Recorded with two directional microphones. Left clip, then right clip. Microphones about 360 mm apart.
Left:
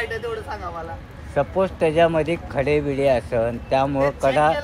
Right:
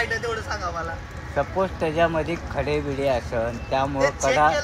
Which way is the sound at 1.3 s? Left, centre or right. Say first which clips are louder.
Left 3 dB; left.